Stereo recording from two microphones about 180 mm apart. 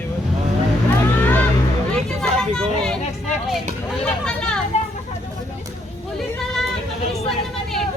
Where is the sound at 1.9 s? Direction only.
5° left (ahead or behind).